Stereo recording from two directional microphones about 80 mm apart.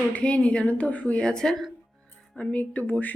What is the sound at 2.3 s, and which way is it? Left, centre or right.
Speech, centre.